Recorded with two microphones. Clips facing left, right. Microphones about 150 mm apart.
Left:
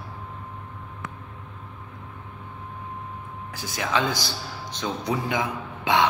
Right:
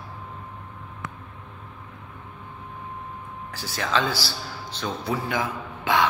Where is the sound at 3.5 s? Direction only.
10° left (ahead or behind).